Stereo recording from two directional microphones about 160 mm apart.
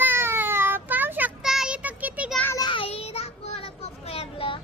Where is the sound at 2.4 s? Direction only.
15° left (ahead or behind).